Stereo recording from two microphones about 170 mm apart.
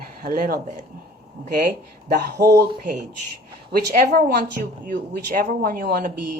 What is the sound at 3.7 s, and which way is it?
Speech, 60° right (ahead or behind).